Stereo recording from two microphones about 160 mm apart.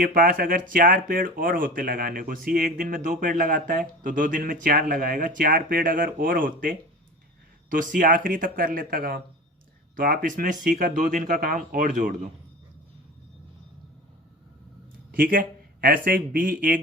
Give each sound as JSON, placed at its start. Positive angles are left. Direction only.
{"t": 0.0, "sound": "speech", "side_deg": -60}
{"t": 15.1, "sound": "speech", "side_deg": -65}